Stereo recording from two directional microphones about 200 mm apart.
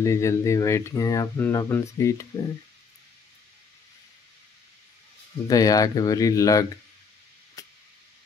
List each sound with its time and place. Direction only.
0.0 s speech: 15° left (ahead or behind)
5.5 s speech: 15° left (ahead or behind)
7.6 s vehicle: 15° left (ahead or behind)